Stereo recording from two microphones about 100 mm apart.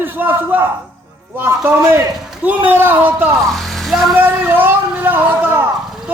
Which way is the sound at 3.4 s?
Centre (ahead or behind).